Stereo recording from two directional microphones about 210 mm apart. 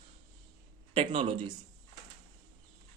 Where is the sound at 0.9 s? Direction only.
25° right (ahead or behind).